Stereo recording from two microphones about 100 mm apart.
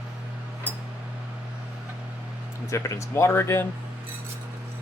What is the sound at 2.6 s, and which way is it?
Speech, 30° left (ahead or behind).